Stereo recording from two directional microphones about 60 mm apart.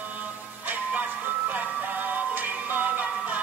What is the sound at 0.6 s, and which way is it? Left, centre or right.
Music, right.